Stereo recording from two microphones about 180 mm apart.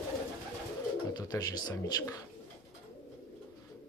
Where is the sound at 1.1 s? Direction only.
20° left (ahead or behind).